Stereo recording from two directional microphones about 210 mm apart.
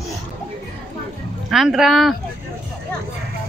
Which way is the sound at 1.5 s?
Centre (ahead or behind).